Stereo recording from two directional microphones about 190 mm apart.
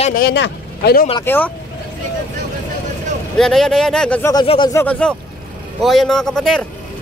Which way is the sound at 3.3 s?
Centre (ahead or behind).